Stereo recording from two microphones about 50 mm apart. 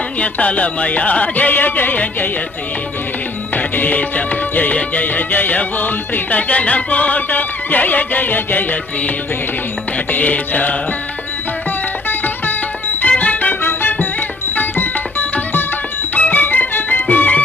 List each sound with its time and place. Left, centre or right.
0.2 s music: left
3.5 s music: left
10.1 s music: left
12.0 s music: left